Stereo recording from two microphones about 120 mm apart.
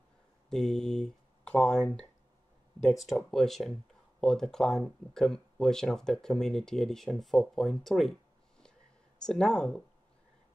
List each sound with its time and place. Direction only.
0.5 s speech: 5° left (ahead or behind)
9.2 s speech: 5° left (ahead or behind)